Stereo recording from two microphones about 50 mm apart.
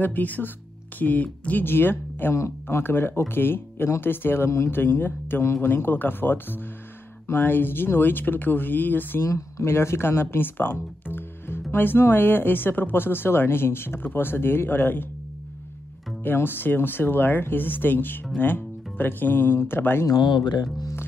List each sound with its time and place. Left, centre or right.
0.0 s speech: left
1.6 s speech: left
2.3 s speech: left
2.8 s speech: left
9.2 s speech: left
16.3 s speech: left